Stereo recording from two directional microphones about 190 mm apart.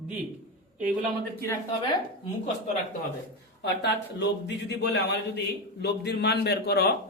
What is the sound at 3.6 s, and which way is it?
A man's voice, 60° left (ahead or behind).